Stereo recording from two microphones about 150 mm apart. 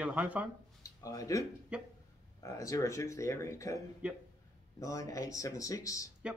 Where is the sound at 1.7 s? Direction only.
10° right (ahead or behind).